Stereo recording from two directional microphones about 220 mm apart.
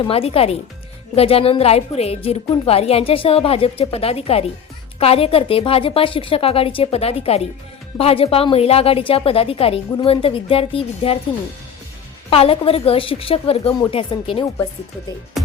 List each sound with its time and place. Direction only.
0.0 s a woman's voice: 25° left (ahead or behind)
12.3 s a woman's voice: 25° left (ahead or behind)
15.4 s music: centre (ahead or behind)